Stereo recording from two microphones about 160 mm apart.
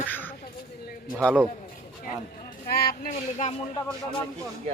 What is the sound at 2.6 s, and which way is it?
Speech, 75° left (ahead or behind).